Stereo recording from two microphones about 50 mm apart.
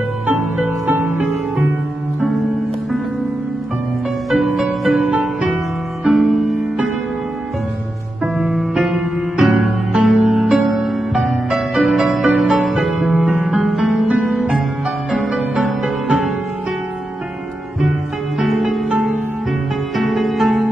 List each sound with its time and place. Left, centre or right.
0.3 s music: right
4.4 s music: centre
8.2 s music: centre
18.4 s music: centre